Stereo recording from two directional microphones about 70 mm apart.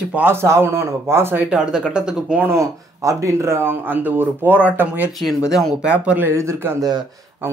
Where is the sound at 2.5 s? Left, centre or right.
Right.